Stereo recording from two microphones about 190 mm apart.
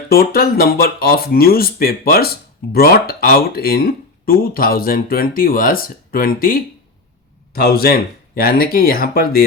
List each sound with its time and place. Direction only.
0.1 s speech: 50° left (ahead or behind)